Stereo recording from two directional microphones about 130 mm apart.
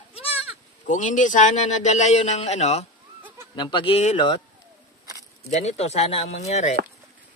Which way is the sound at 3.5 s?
35° left (ahead or behind).